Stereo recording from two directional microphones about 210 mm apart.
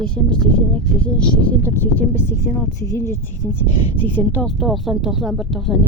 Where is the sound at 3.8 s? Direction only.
20° right (ahead or behind).